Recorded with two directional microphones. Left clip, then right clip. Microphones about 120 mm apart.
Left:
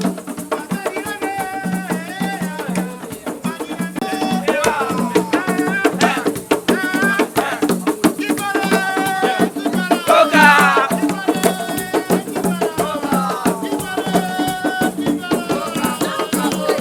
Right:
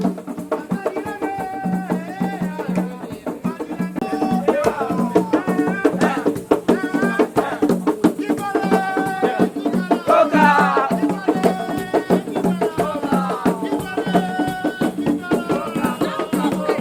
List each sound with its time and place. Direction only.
0.5 s music: 40° left (ahead or behind)
4.0 s music: 40° left (ahead or behind)